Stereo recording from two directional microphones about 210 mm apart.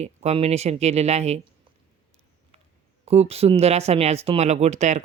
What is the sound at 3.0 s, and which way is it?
Speech, 30° right (ahead or behind).